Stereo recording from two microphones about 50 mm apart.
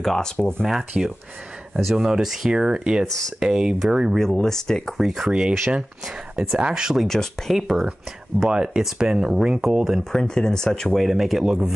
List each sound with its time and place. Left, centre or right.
0.0 s speech: centre
0.4 s speech: left
1.0 s speech: centre
1.8 s speech: centre
3.1 s speech: centre
3.3 s speech: centre
4.2 s speech: centre
4.9 s speech: centre
6.3 s speech: centre
7.0 s speech: centre
7.5 s speech: centre
10.1 s speech: centre
11.0 s speech: centre